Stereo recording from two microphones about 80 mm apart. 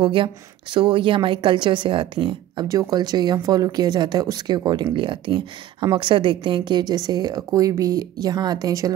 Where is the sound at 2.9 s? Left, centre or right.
Right.